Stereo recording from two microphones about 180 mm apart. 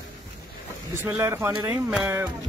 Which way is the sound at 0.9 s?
15° right (ahead or behind).